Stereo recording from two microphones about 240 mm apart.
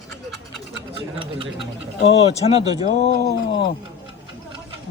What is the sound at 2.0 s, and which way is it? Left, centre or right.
Speech, left.